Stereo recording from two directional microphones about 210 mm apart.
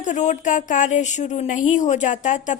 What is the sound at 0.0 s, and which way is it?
Speech, 35° left (ahead or behind).